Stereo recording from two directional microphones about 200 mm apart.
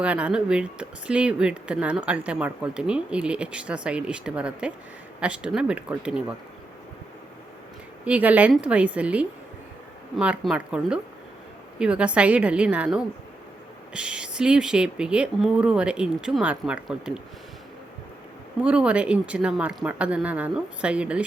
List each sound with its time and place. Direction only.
0.0 s speech: 5° right (ahead or behind)
8.0 s a woman's voice: 5° right (ahead or behind)
18.6 s speech: 5° right (ahead or behind)